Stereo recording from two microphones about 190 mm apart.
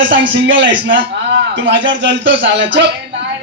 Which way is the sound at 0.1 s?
75° right (ahead or behind).